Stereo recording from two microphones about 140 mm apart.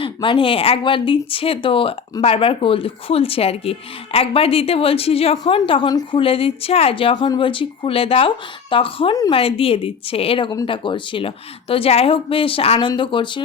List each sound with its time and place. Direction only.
0.0 s speech: 35° left (ahead or behind)
5.9 s a woman's voice: 25° left (ahead or behind)
6.1 s speech: 40° left (ahead or behind)